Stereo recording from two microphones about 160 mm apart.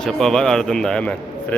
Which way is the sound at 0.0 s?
5° left (ahead or behind).